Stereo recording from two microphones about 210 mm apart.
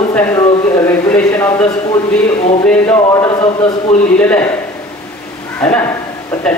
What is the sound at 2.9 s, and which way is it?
Speech, 15° left (ahead or behind).